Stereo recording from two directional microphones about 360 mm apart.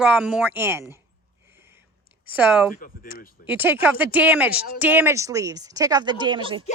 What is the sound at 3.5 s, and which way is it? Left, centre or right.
Speech, centre.